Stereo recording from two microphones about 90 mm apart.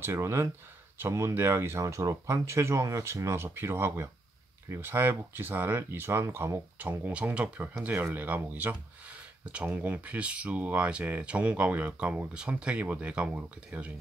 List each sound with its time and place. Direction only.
0.0 s speech: 30° right (ahead or behind)